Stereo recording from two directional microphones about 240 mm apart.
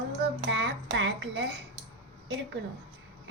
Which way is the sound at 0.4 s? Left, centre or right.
Right.